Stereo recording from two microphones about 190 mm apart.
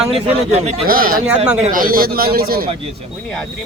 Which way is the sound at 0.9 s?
50° right (ahead or behind).